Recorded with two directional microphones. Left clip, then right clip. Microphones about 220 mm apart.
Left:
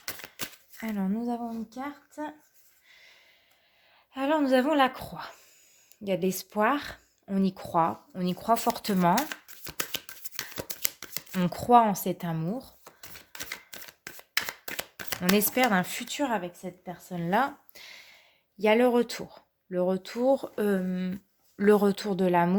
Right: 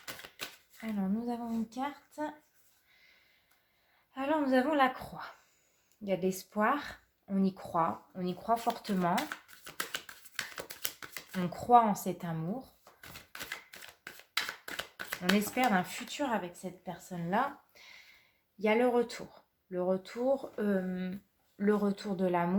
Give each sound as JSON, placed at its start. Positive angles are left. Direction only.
{"t": 0.8, "sound": "speech", "side_deg": 45}
{"t": 4.1, "sound": "speech", "side_deg": 45}
{"t": 9.9, "sound": "shuffling cards", "side_deg": 25}
{"t": 11.3, "sound": "speech", "side_deg": 50}
{"t": 13.7, "sound": "a sound", "side_deg": 35}
{"t": 15.5, "sound": "speech", "side_deg": 50}
{"t": 17.2, "sound": "a sound", "side_deg": 50}
{"t": 18.6, "sound": "speech", "side_deg": 45}